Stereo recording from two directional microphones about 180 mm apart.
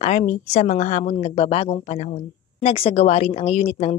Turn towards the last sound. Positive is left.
turn(degrees=35)  # may be behind; listen again after turning